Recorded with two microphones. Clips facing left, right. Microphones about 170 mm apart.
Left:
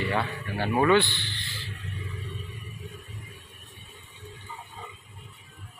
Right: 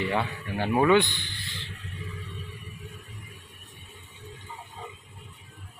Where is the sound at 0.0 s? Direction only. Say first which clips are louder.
Even; 15° right (ahead or behind).